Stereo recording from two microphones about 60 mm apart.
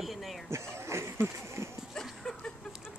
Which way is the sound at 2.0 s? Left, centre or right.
Centre.